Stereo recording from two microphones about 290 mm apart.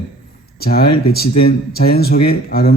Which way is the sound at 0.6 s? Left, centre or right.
Left.